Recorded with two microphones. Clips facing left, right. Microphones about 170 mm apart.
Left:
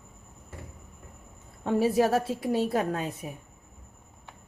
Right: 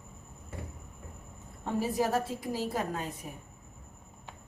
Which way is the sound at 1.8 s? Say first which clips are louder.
Left 6 dB; 70° left (ahead or behind).